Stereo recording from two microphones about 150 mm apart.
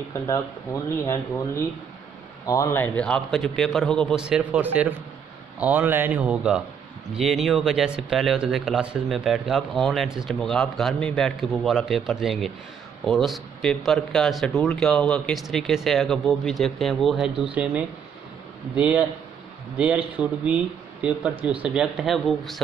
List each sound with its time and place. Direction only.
0.8 s speech: 20° left (ahead or behind); by 17.5 s centre (ahead or behind)
18.8 s speech: 10° right (ahead or behind)